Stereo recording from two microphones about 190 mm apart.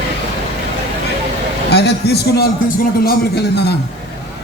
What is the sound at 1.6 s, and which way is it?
A man's voice, 60° left (ahead or behind).